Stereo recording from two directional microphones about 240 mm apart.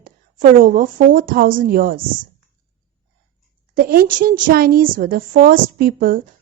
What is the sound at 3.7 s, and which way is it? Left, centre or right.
A woman's voice, right.